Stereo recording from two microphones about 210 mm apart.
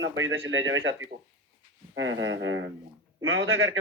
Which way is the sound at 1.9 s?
65° right (ahead or behind).